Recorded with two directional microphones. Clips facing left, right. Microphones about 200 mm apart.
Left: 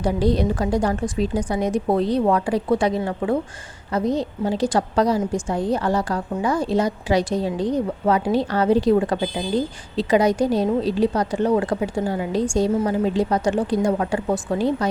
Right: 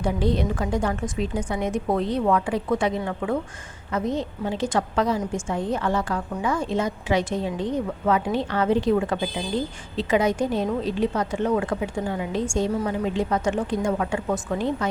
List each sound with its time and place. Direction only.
0.0 s a woman's voice: 35° left (ahead or behind)